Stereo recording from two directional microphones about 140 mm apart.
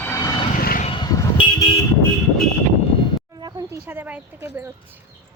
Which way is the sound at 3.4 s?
30° right (ahead or behind).